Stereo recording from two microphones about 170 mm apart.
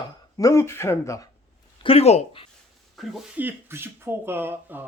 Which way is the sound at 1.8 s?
35° left (ahead or behind).